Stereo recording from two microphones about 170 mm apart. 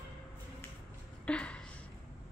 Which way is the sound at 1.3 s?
5° left (ahead or behind).